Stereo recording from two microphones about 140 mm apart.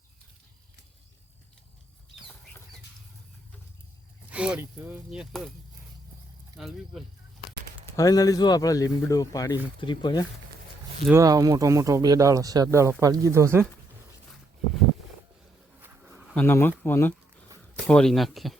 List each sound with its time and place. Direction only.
4.3 s speech: 10° right (ahead or behind)
6.6 s speech: centre (ahead or behind)
7.9 s speech: 25° left (ahead or behind)
11.1 s speech: 25° right (ahead or behind)
16.3 s speech: 15° left (ahead or behind)